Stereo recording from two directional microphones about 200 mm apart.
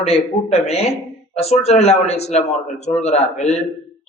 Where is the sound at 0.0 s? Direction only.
30° left (ahead or behind).